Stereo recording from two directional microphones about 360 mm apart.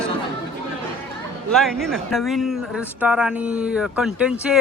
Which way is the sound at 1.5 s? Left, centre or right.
Centre.